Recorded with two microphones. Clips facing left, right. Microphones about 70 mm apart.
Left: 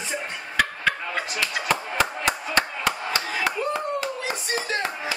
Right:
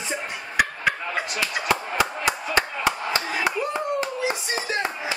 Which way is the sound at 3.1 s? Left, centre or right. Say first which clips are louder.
Right 1 dB; right.